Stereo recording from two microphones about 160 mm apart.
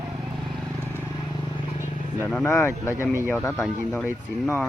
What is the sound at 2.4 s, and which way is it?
Speech, 15° left (ahead or behind).